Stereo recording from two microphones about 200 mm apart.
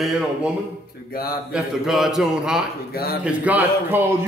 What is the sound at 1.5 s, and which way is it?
A man's voice, centre (ahead or behind).